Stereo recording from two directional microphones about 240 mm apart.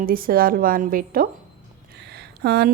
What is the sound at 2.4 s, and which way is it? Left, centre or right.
Speech, right.